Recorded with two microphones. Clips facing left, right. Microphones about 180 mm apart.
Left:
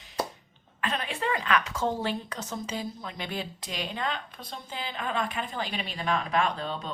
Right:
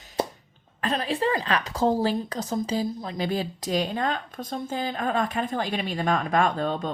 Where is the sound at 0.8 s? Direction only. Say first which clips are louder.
Right 6 dB; 35° right (ahead or behind).